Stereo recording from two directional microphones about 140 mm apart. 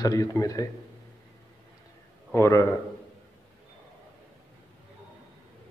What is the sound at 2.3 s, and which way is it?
Speech, 20° left (ahead or behind).